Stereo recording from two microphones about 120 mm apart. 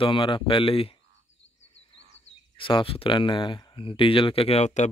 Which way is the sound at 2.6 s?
45° left (ahead or behind).